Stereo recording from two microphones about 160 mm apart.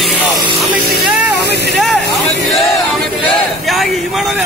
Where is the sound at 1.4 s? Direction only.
90° right.